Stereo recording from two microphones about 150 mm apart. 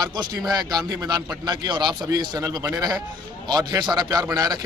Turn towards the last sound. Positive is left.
turn(degrees=-25)  # may be behind; listen again after turning